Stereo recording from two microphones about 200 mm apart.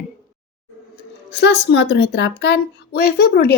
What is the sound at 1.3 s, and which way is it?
A woman's voice, 60° left (ahead or behind).